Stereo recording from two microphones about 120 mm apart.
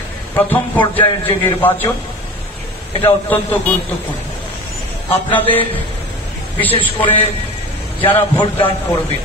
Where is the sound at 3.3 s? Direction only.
15° left (ahead or behind).